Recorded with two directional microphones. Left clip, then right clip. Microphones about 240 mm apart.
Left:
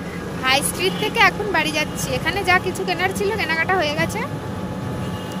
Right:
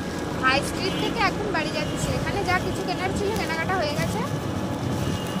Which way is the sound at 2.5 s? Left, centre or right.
Left.